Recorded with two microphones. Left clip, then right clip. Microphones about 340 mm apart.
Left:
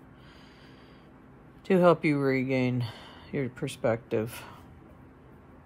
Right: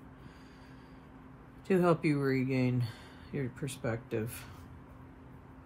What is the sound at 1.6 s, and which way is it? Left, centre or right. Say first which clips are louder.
Speech: left 6 dB; centre.